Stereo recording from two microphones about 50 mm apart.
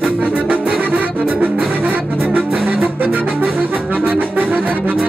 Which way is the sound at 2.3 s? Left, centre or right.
Right.